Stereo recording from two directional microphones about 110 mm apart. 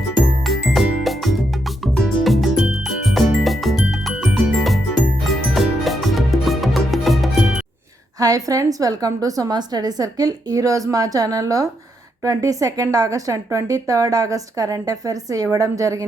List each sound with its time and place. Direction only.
0.2 s music: centre (ahead or behind)
8.2 s a woman's voice: 30° right (ahead or behind)